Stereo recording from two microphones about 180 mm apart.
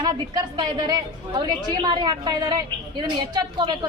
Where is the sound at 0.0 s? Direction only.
25° right (ahead or behind).